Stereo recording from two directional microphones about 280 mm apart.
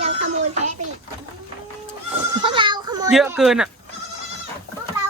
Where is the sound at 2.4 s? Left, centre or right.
Centre.